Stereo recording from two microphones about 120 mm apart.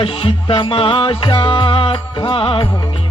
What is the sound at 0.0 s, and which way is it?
Music, 50° left (ahead or behind).